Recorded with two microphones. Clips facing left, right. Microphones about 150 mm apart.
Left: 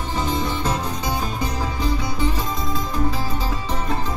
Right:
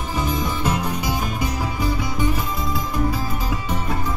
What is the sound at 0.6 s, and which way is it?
Music, 10° right (ahead or behind).